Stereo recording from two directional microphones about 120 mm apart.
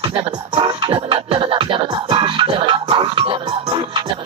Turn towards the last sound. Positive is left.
turn(degrees=-45)  # may be behind; listen again after turning